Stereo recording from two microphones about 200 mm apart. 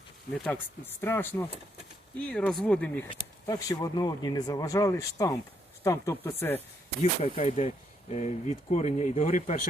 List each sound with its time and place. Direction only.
1.0 s speech: 10° left (ahead or behind)
3.1 s speech: 20° left (ahead or behind)
7.0 s speech: 30° left (ahead or behind)